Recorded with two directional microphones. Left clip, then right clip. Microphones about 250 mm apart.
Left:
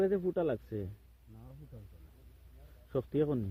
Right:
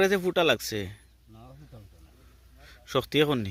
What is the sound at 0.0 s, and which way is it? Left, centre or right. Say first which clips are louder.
Speech: right 8 dB; right.